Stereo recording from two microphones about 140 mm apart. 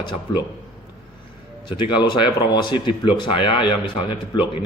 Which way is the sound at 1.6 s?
35° left (ahead or behind).